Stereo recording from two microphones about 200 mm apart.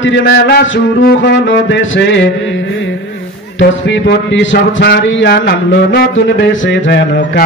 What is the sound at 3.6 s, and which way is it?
Speech, 65° left (ahead or behind).